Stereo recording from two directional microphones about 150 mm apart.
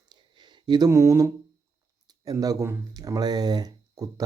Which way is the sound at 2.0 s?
25° right (ahead or behind).